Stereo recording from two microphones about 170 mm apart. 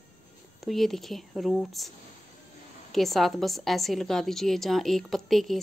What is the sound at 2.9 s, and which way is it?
Speech, centre (ahead or behind).